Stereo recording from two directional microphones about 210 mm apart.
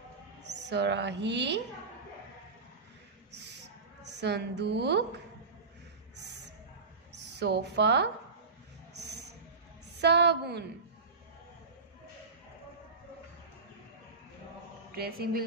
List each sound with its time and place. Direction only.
0.4 s a woman's voice: 55° right (ahead or behind)
4.0 s a woman's voice: 55° right (ahead or behind)
7.3 s a woman's voice: 55° right (ahead or behind)
9.9 s a woman's voice: 55° right (ahead or behind)
15.0 s a woman's voice: 45° right (ahead or behind)